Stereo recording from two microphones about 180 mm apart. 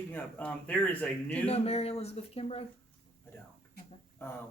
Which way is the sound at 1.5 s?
35° left (ahead or behind).